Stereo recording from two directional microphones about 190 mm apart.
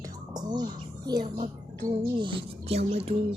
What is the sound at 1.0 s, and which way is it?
A child's voice, 20° right (ahead or behind).